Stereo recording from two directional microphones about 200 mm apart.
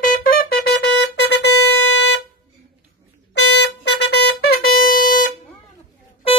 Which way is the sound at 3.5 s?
55° left (ahead or behind).